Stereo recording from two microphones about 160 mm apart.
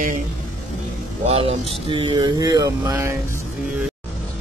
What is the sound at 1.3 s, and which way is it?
Speech, 35° right (ahead or behind).